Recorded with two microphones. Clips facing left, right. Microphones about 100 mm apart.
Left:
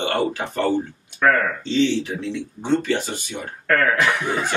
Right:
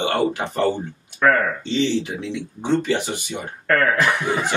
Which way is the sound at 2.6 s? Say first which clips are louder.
Right 1 dB; 15° right (ahead or behind).